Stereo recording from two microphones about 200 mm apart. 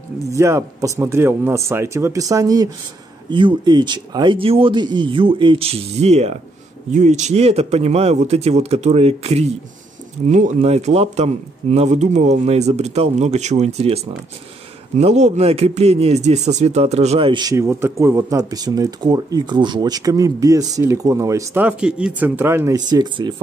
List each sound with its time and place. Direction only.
0.3 s a man's voice: 15° right (ahead or behind)